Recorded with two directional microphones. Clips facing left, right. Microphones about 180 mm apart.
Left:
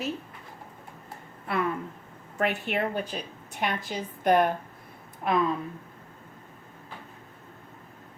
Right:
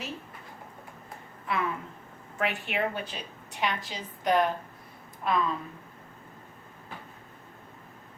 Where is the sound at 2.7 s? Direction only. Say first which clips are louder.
Left 2 dB; 45° left (ahead or behind).